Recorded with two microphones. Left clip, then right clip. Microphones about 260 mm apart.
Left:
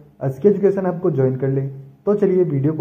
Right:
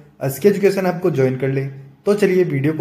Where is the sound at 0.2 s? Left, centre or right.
Centre.